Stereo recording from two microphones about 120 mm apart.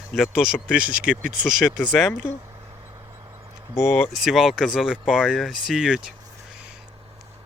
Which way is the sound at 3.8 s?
20° left (ahead or behind).